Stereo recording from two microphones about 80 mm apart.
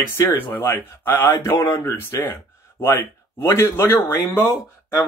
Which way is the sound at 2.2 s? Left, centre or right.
Left.